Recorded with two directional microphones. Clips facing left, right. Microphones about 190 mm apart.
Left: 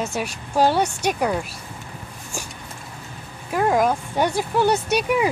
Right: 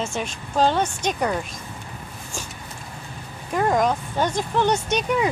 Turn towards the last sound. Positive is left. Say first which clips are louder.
# left 2 dB
turn(degrees=10)  # may be behind; listen again after turning